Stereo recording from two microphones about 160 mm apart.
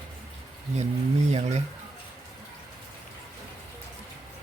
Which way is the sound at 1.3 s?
45° right (ahead or behind).